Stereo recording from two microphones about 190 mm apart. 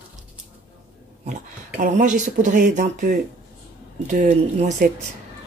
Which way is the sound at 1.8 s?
40° right (ahead or behind).